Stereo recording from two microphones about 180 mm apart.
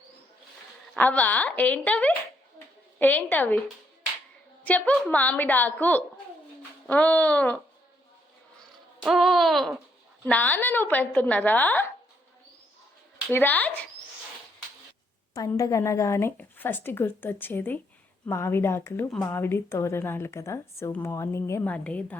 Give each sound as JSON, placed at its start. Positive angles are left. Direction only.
{"t": 0.9, "sound": "a woman's voice", "side_deg": 10}
{"t": 4.6, "sound": "a woman's voice", "side_deg": 10}
{"t": 9.0, "sound": "a sound", "side_deg": 0}
{"t": 10.2, "sound": "a woman's voice", "side_deg": 10}
{"t": 13.3, "sound": "a woman's voice", "side_deg": 10}
{"t": 15.4, "sound": "a woman's voice", "side_deg": 20}